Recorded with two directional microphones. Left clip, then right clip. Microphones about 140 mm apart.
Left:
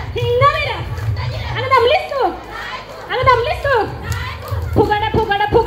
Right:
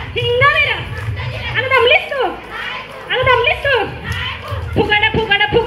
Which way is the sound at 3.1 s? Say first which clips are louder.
Right 1 dB; 90° left.